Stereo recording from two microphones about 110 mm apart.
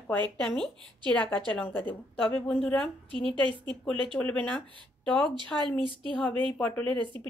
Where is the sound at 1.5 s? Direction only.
15° left (ahead or behind).